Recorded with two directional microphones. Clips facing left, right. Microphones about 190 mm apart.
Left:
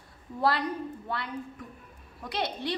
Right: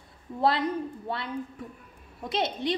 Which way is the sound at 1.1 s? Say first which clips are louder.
Right 3 dB; 25° right (ahead or behind).